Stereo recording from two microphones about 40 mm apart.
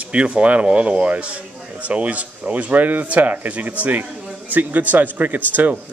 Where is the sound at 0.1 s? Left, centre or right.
Right.